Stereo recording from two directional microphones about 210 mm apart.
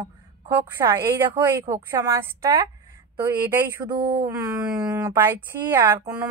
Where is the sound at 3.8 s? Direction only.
20° right (ahead or behind).